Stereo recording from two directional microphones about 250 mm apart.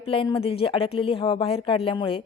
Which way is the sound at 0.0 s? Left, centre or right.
Left.